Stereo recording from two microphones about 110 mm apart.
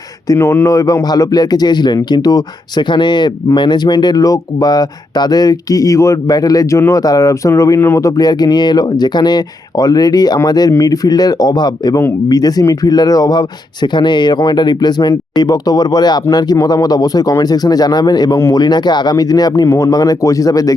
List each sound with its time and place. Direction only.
0.3 s speech: 25° left (ahead or behind)